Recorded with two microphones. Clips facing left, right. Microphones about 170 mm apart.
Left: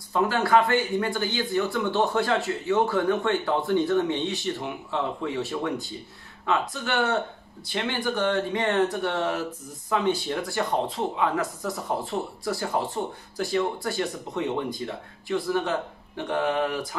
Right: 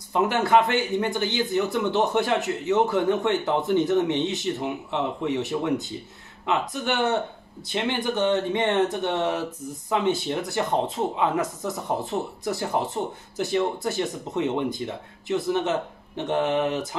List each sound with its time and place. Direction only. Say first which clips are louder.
0.1 s a man's voice: right 1 dB; 20° right (ahead or behind)